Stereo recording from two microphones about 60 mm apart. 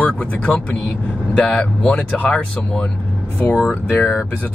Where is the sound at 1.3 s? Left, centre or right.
Centre.